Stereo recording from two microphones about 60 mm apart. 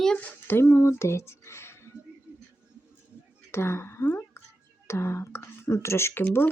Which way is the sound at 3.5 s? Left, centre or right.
Left.